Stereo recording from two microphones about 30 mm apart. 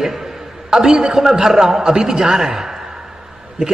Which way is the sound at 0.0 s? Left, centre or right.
Centre.